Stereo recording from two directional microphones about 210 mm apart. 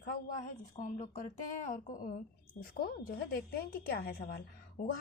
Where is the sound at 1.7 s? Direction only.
40° left (ahead or behind).